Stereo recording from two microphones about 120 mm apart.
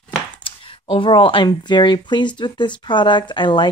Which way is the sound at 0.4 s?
45° left (ahead or behind).